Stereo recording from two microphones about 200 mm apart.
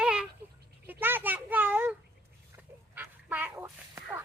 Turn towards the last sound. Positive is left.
turn(degrees=-10)  # may be behind; listen again after turning